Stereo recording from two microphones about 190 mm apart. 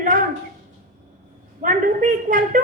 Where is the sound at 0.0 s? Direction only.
40° right (ahead or behind).